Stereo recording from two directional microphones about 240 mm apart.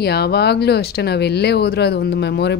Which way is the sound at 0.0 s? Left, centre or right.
Left.